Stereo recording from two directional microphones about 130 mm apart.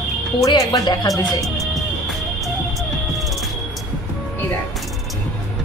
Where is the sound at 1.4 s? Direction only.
Centre (ahead or behind).